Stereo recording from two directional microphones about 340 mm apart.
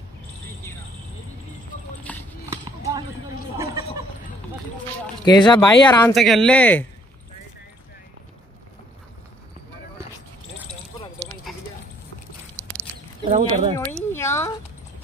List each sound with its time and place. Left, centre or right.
2.1 s clip-clop: centre
2.5 s clip-clop: centre
5.2 s speech: centre
6.1 s speech: centre
11.5 s clip-clop: centre
12.6 s a sound: centre
13.2 s speech: centre
13.7 s a sound: centre